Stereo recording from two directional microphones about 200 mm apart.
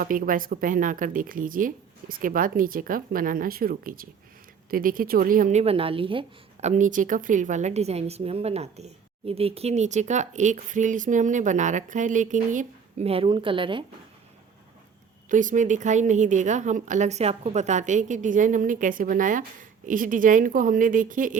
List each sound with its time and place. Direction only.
0.0 s a woman's voice: 45° right (ahead or behind); by 13.8 s 25° right (ahead or behind)
15.3 s a woman's voice: 40° right (ahead or behind)